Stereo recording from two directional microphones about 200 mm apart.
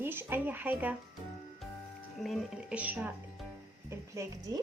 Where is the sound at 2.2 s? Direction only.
Centre (ahead or behind).